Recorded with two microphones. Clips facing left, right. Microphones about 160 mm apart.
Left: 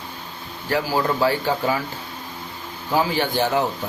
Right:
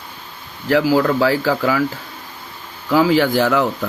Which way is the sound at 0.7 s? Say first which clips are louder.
Right 7 dB; 90° right.